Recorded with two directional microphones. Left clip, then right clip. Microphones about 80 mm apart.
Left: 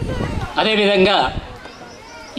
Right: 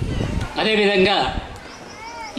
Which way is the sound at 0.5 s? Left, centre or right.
Left.